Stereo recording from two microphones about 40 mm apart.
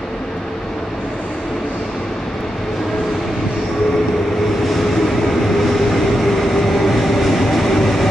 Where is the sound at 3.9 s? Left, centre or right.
Centre.